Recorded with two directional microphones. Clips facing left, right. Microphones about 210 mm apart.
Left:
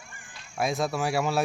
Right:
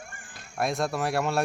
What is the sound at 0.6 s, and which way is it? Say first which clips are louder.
Speech: even; centre (ahead or behind).